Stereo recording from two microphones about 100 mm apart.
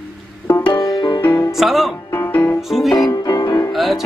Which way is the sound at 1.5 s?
Centre (ahead or behind).